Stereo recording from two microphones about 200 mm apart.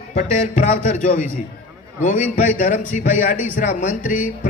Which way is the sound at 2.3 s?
40° left (ahead or behind).